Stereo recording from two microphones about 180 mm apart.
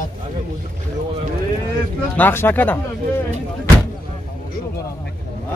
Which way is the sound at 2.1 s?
10° left (ahead or behind).